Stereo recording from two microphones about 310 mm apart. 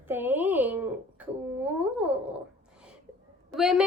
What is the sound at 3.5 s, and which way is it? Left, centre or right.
Speech, centre.